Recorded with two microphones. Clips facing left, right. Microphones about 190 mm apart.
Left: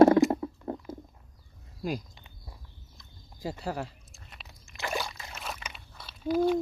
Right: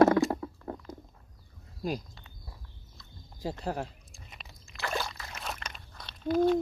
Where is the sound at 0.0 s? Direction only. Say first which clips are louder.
Left 4 dB; 25° left (ahead or behind).